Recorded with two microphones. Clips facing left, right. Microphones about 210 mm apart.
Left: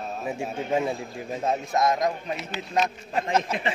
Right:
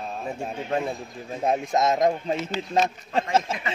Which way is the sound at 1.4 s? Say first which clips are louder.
Right 2 dB; 20° right (ahead or behind).